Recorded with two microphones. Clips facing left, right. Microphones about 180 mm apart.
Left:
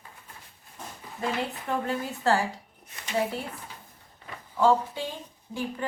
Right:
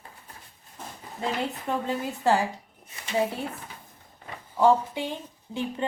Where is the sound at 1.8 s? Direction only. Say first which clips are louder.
Right 2 dB; 15° right (ahead or behind).